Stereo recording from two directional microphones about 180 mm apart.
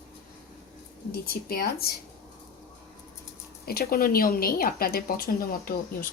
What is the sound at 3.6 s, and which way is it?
A woman's voice, 60° left (ahead or behind).